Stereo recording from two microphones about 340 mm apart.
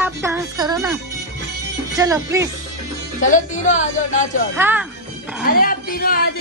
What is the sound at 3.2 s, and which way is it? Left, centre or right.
Speech, left.